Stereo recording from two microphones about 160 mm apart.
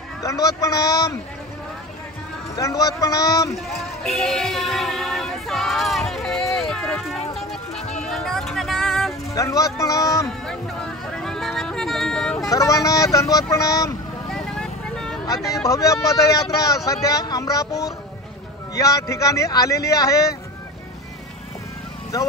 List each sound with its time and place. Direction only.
0.2 s speech: 20° left (ahead or behind)
2.5 s speech: 20° left (ahead or behind)
3.5 s music: centre (ahead or behind)
9.3 s speech: 20° left (ahead or behind)
10.2 s a sound: 5° left (ahead or behind)
12.4 s speech: 20° left (ahead or behind)
14.3 s vehicle: centre (ahead or behind)
15.2 s speech: 20° left (ahead or behind)